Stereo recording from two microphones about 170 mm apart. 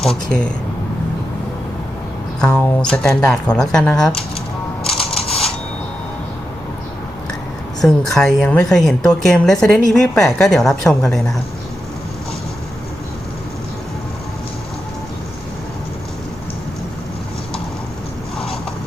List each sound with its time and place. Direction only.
0.3 s speech: 5° left (ahead or behind)
2.4 s a woman's voice: 10° left (ahead or behind)
4.8 s music: 35° left (ahead or behind)
7.8 s a woman's voice: 5° left (ahead or behind)